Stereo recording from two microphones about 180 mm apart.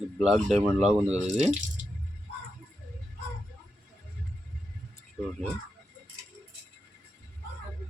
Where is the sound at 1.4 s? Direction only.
40° right (ahead or behind).